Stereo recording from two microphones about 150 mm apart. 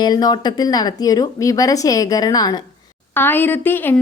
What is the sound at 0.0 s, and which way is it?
A woman's voice, 25° left (ahead or behind).